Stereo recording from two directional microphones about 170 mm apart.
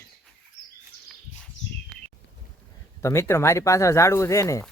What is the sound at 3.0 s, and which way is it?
Speech, 15° left (ahead or behind).